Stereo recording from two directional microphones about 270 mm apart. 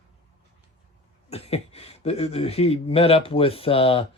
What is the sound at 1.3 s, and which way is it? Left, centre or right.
Speech, left.